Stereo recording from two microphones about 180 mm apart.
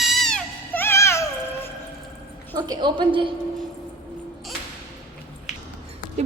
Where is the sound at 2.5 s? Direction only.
25° right (ahead or behind).